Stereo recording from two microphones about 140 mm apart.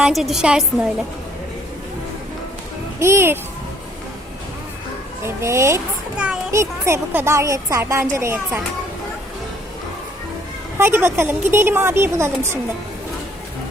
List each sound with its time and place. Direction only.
0.0 s a woman's voice: centre (ahead or behind)
3.0 s a woman's voice: 20° right (ahead or behind)
5.2 s speech: 20° right (ahead or behind)
6.1 s a woman's voice: 5° right (ahead or behind)
6.5 s speech: 20° right (ahead or behind)
10.8 s a woman's voice: 15° right (ahead or behind)